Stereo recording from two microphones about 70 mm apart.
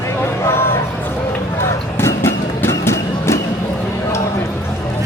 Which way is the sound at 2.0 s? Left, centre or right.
Left.